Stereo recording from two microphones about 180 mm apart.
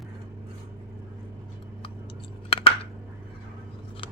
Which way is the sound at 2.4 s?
30° left (ahead or behind).